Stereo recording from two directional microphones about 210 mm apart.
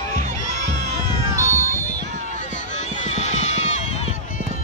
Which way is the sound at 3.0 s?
30° left (ahead or behind).